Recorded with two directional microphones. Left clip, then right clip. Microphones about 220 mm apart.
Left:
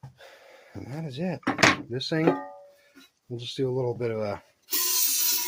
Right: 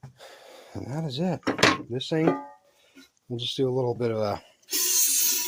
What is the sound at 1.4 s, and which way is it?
Speech, centre (ahead or behind).